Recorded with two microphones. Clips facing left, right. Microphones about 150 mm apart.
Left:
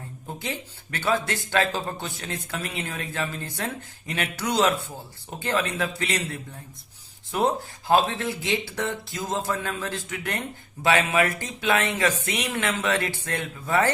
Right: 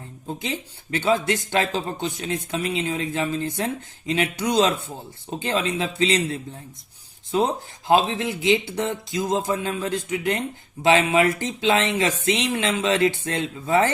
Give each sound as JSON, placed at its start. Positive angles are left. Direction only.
{"t": 0.3, "sound": "speech", "side_deg": -20}